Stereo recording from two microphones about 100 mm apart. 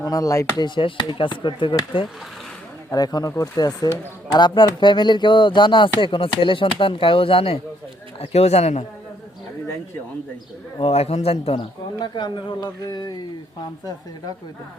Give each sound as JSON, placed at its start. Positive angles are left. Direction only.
{"t": 0.0, "sound": "speech", "side_deg": 35}
{"t": 0.6, "sound": "speech", "side_deg": 55}
{"t": 2.9, "sound": "speech", "side_deg": 40}
{"t": 8.2, "sound": "a man's voice", "side_deg": 90}
{"t": 10.8, "sound": "speech", "side_deg": 85}
{"t": 11.9, "sound": "speech", "side_deg": 45}